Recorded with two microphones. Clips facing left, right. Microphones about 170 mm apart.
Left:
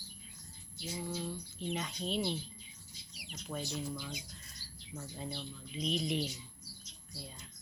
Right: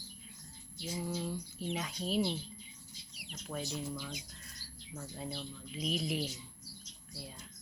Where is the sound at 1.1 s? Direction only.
10° right (ahead or behind).